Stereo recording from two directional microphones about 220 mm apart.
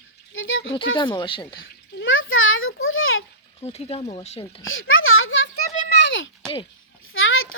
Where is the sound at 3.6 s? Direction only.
30° left (ahead or behind).